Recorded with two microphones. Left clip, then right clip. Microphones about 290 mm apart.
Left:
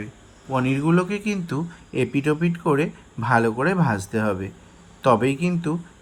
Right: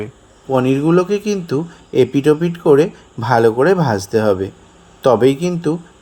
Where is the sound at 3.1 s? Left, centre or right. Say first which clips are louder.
Right 8 dB; right.